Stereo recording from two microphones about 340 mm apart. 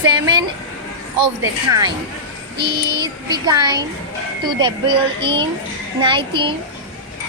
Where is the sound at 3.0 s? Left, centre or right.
Centre.